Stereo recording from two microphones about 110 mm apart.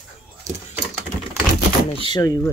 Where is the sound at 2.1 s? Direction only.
35° left (ahead or behind).